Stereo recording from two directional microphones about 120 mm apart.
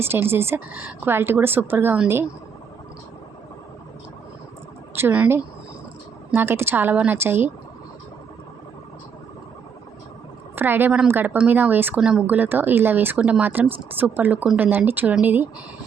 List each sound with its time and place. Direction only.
0.0 s speech: 20° right (ahead or behind)
4.9 s speech: 15° right (ahead or behind)
10.5 s a woman's voice: 15° right (ahead or behind)